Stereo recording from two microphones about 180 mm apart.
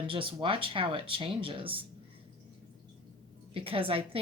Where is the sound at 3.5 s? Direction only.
30° right (ahead or behind).